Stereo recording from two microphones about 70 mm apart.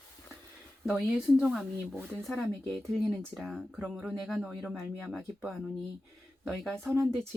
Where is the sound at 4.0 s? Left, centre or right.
Centre.